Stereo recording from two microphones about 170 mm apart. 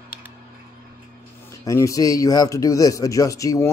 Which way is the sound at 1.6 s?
20° left (ahead or behind).